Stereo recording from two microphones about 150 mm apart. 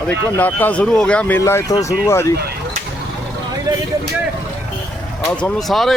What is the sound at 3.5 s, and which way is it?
Vehicle, 25° right (ahead or behind).